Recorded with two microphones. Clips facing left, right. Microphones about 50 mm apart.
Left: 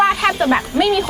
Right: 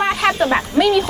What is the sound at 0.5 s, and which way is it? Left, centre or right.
Speech, centre.